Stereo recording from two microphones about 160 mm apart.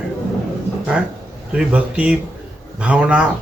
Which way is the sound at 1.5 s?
5° right (ahead or behind).